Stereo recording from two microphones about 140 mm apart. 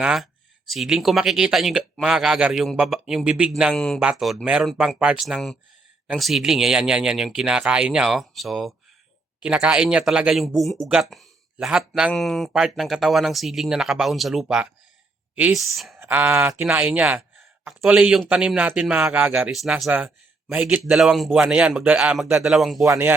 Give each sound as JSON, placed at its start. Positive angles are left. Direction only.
{"t": 0.0, "sound": "a man's voice", "side_deg": -5}
{"t": 16.0, "sound": "a man's voice", "side_deg": -15}
{"t": 22.9, "sound": "speech", "side_deg": -20}